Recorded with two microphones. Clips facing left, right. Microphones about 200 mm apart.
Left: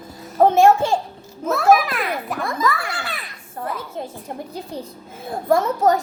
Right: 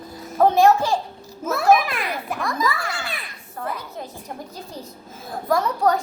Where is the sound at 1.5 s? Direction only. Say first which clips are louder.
Left 2 dB; centre (ahead or behind).